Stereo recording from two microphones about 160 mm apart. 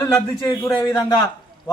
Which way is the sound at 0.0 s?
25° left (ahead or behind).